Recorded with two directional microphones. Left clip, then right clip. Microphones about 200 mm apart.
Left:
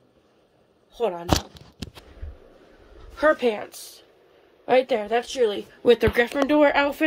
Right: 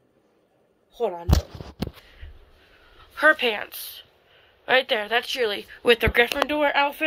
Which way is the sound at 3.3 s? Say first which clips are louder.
Even; centre (ahead or behind).